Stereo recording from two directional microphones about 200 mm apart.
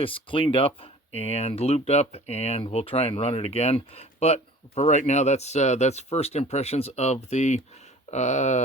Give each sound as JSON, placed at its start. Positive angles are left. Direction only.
{"t": 0.0, "sound": "speech", "side_deg": 25}